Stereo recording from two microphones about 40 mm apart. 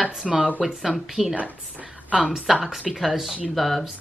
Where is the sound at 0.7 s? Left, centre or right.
Centre.